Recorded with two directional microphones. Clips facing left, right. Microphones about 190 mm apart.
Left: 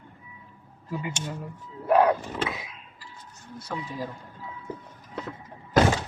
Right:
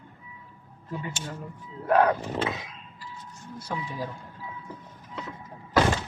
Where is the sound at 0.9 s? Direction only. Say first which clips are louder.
Left 2 dB; 10° left (ahead or behind).